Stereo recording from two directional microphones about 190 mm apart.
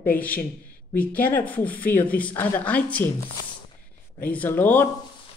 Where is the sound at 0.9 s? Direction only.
10° left (ahead or behind).